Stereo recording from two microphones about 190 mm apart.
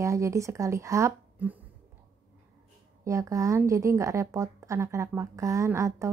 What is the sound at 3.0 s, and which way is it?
Speech, 15° right (ahead or behind).